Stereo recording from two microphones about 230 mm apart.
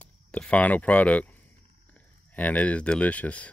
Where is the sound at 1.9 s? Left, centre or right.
Centre.